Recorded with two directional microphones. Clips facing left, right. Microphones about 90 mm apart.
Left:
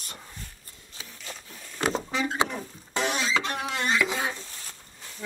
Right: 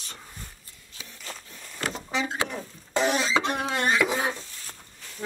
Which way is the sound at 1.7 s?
25° left (ahead or behind).